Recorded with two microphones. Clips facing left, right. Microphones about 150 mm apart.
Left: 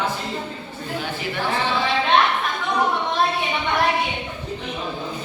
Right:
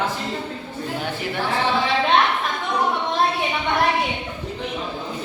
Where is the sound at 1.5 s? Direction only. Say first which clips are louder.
Right 2 dB; centre (ahead or behind).